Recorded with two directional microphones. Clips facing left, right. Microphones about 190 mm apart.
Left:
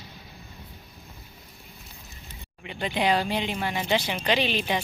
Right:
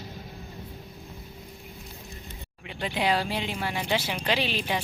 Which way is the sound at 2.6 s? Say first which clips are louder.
Left 2 dB; centre (ahead or behind).